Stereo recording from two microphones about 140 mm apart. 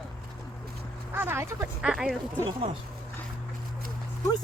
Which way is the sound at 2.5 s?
45° right (ahead or behind).